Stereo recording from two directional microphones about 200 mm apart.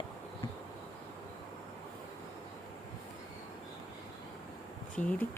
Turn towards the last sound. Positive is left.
turn(degrees=10)  # may be behind; listen again after turning